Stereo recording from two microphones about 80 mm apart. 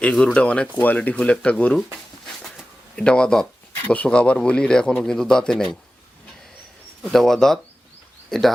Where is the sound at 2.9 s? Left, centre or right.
Centre.